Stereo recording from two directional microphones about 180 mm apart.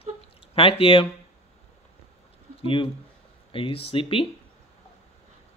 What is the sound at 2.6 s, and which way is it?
Speech, 30° left (ahead or behind).